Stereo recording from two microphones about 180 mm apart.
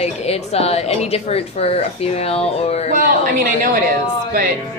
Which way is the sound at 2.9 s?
50° right (ahead or behind).